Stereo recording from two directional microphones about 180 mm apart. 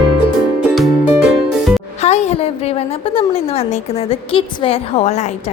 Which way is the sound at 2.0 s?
35° left (ahead or behind).